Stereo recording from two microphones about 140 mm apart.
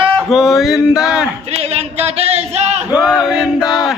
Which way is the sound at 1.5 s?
50° right (ahead or behind).